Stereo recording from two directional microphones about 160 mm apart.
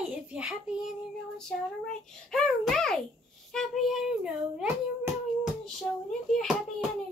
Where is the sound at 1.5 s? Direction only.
5° left (ahead or behind).